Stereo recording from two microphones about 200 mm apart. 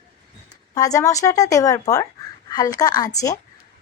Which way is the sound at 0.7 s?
15° left (ahead or behind).